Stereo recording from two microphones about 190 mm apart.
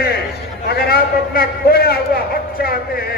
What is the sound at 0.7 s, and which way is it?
A man's voice, 55° left (ahead or behind).